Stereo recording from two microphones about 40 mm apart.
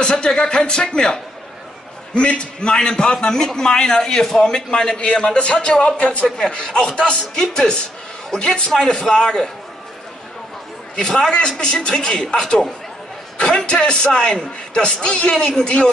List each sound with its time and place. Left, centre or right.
0.0 s a man's voice: left
6.2 s a man's voice: centre
6.5 s a man's voice: left
11.0 s a man's voice: centre
13.7 s a man's voice: left